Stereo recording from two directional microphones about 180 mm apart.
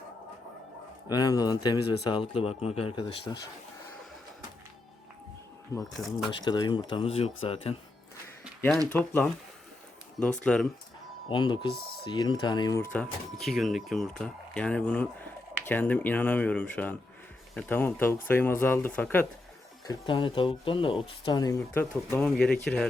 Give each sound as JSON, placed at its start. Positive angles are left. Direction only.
{"t": 1.0, "sound": "speech", "side_deg": 20}
{"t": 5.7, "sound": "speech", "side_deg": 20}
{"t": 8.9, "sound": "speech", "side_deg": 10}
{"t": 10.4, "sound": "speech", "side_deg": 5}
{"t": 11.3, "sound": "speech", "side_deg": 25}
{"t": 19.8, "sound": "speech", "side_deg": 25}